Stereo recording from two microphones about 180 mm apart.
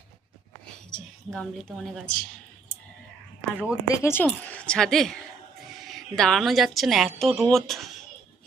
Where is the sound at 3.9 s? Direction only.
15° left (ahead or behind).